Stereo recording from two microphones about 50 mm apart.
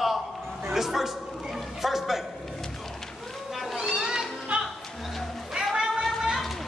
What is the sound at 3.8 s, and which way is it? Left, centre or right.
Children playing, centre.